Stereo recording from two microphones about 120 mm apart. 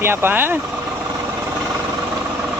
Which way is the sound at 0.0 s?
20° right (ahead or behind).